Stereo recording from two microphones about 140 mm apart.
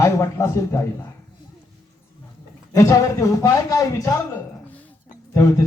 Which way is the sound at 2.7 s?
25° left (ahead or behind).